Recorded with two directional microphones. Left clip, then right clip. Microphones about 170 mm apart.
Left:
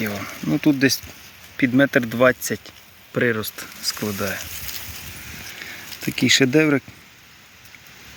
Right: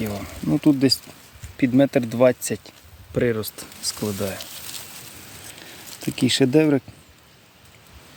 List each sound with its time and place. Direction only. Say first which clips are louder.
0.0 s speech: left 2 dB; 20° right (ahead or behind)
6.0 s speech: left 3 dB; 5° right (ahead or behind)